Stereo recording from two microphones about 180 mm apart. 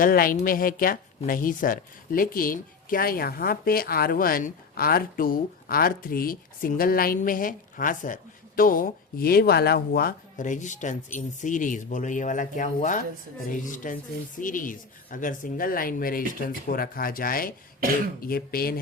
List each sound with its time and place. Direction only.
0.0 s speech: 55° left (ahead or behind)